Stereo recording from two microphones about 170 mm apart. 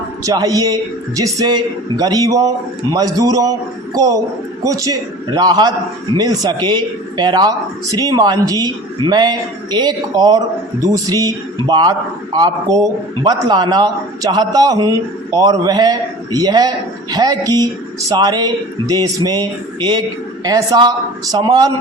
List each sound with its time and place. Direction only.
0.3 s a man's voice: 20° right (ahead or behind)